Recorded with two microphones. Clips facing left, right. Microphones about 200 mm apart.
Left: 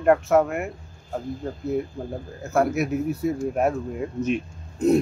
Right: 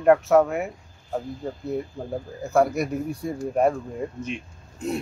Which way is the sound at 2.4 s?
Centre (ahead or behind).